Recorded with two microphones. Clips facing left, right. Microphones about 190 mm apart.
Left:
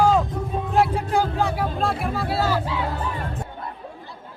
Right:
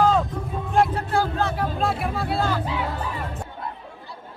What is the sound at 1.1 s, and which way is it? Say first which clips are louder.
Speech: left 1 dB; 15° left (ahead or behind).